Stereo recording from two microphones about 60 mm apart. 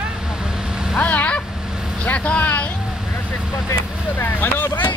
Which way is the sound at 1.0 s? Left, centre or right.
Left.